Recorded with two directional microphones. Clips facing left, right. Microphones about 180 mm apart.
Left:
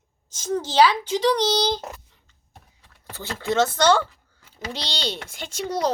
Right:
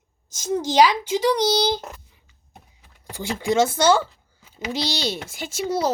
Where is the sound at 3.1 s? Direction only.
10° right (ahead or behind).